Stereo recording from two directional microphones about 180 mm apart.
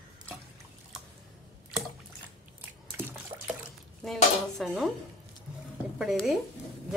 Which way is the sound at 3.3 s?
20° right (ahead or behind).